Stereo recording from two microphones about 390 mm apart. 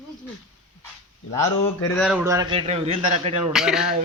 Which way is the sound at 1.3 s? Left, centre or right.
Centre.